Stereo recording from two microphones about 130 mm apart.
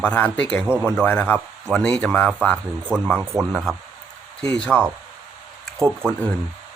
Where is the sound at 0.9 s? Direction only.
10° left (ahead or behind).